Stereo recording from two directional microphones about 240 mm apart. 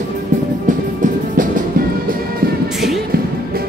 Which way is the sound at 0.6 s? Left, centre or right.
Right.